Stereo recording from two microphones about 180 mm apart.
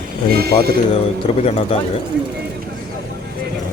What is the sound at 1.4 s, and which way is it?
Speech, 35° left (ahead or behind).